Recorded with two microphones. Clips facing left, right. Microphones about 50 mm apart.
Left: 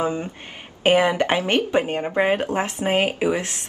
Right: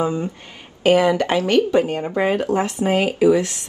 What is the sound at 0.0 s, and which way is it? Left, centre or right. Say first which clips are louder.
Speech: right 2 dB; left.